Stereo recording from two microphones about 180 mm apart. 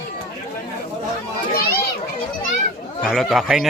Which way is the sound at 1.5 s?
60° left (ahead or behind).